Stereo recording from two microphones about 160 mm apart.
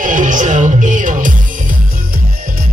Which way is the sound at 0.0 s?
55° right (ahead or behind).